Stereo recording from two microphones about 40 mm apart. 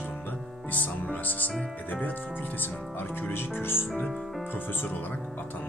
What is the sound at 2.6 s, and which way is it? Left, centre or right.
Speech, left.